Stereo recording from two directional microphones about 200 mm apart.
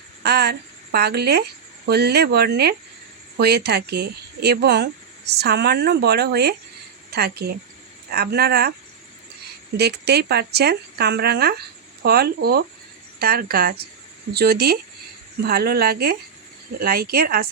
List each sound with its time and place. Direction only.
0.2 s speech: 55° right (ahead or behind)
9.7 s speech: 55° right (ahead or behind)